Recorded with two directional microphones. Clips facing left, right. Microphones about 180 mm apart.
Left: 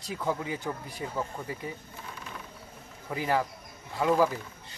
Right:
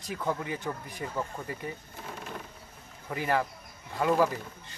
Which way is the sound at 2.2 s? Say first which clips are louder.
Right 5 dB; 50° right (ahead or behind).